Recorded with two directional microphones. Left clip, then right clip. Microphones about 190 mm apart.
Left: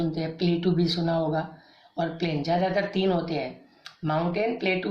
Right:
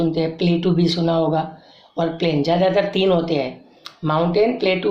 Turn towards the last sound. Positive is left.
turn(degrees=-15)  # may be behind; listen again after turning